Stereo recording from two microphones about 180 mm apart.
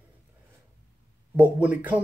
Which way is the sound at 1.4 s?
10° right (ahead or behind).